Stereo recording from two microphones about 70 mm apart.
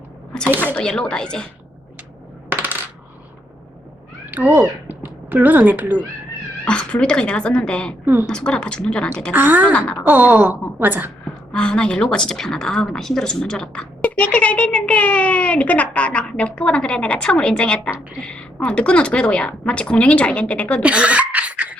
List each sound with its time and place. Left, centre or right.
0.6 s speech: centre
2.5 s coin: right
4.3 s speech: right
6.7 s speech: centre
8.0 s speech: right
8.3 s speech: centre
9.3 s a woman's voice: right
9.7 s a woman's voice: centre
10.1 s a woman's voice: right
11.5 s a woman's voice: centre
20.8 s cough: centre